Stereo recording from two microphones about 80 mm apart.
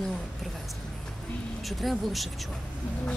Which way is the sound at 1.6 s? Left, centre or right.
Centre.